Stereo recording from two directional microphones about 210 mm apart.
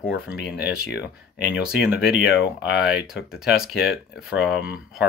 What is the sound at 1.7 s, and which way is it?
Speech, 5° right (ahead or behind).